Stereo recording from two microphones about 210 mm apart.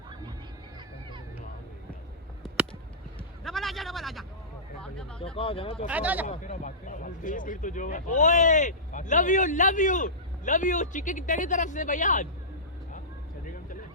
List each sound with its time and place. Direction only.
3.4 s a sound: centre (ahead or behind)
5.2 s speech: 25° left (ahead or behind)
5.9 s speech: 5° right (ahead or behind)
6.3 s speech: 35° left (ahead or behind)